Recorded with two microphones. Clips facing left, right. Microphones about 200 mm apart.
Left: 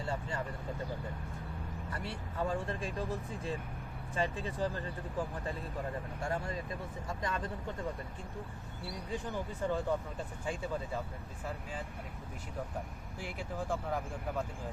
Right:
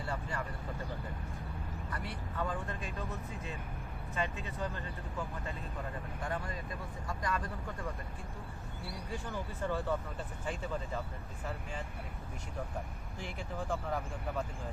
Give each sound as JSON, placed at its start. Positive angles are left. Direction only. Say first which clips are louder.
{"t": 0.0, "sound": "speech", "louder": "left 2 dB", "side_deg": 25}
{"t": 1.9, "sound": "speech", "louder": "left 1 dB", "side_deg": 25}
{"t": 9.1, "sound": "speech", "louder": "left 3 dB", "side_deg": 15}
{"t": 13.1, "sound": "speech", "louder": "left 1 dB", "side_deg": 10}